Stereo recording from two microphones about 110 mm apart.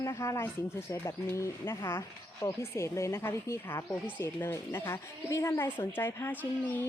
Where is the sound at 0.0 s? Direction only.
30° left (ahead or behind).